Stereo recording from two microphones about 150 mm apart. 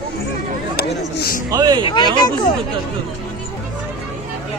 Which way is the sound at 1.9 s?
30° left (ahead or behind).